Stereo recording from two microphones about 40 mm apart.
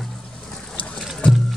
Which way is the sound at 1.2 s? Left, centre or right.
Left.